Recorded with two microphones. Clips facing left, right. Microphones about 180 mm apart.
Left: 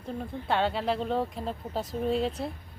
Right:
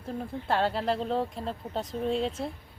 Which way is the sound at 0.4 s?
Centre (ahead or behind).